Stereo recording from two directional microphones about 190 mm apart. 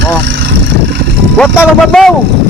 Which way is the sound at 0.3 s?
70° right (ahead or behind).